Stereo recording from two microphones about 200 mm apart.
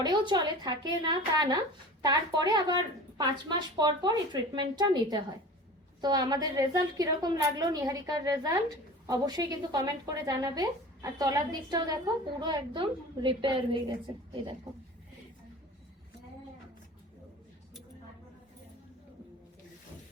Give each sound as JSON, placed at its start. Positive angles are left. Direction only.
{"t": 0.0, "sound": "a woman's voice", "side_deg": -20}